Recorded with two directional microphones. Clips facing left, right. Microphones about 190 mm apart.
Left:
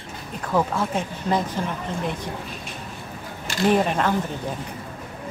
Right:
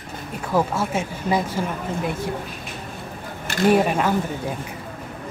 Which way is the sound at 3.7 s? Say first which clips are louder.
Right 2 dB; 10° right (ahead or behind).